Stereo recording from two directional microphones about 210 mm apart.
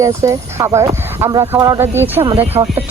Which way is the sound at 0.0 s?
15° right (ahead or behind).